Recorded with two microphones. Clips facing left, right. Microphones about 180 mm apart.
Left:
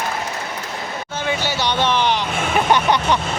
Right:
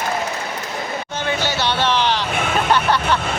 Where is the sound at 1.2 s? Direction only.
10° left (ahead or behind).